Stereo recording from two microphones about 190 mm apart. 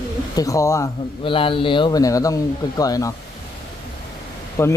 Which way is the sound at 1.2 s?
25° left (ahead or behind).